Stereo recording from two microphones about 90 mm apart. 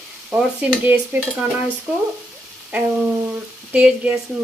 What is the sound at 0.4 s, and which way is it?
Speech, 15° right (ahead or behind).